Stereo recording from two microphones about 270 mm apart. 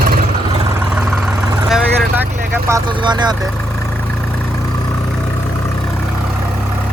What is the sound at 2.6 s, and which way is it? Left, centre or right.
Speech, centre.